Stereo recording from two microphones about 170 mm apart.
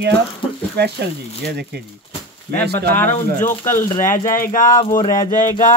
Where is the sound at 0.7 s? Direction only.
75° right (ahead or behind).